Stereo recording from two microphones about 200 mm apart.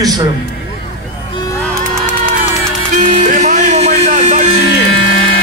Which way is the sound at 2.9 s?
40° right (ahead or behind).